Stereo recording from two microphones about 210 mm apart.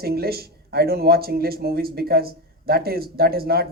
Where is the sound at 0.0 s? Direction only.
45° right (ahead or behind).